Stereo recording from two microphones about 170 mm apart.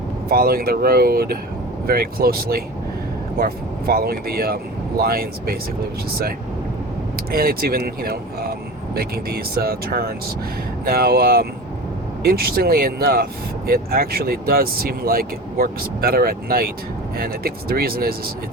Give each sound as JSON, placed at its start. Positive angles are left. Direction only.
{"t": 0.3, "sound": "speech", "side_deg": -60}
{"t": 7.3, "sound": "speech", "side_deg": -60}